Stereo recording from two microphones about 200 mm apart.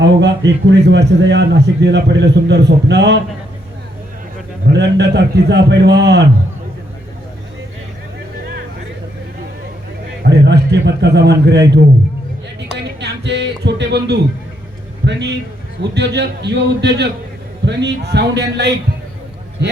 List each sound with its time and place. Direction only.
0.0 s a man's voice: 60° right (ahead or behind)
4.6 s a man's voice: 60° right (ahead or behind)
10.2 s a man's voice: 60° right (ahead or behind)
12.7 s music: 60° right (ahead or behind)
15.0 s a man's voice: 60° right (ahead or behind)